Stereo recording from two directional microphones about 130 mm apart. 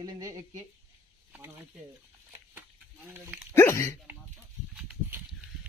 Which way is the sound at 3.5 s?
20° left (ahead or behind).